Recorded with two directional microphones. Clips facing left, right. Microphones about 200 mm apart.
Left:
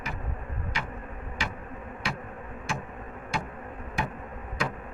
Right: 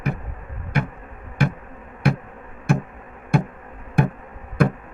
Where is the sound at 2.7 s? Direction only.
60° right (ahead or behind).